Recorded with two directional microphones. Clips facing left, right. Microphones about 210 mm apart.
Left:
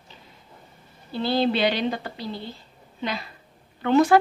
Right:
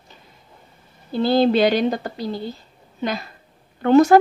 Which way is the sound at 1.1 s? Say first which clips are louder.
Right 6 dB; 45° right (ahead or behind).